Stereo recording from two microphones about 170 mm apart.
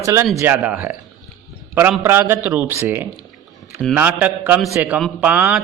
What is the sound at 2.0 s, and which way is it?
A man's voice, 15° right (ahead or behind).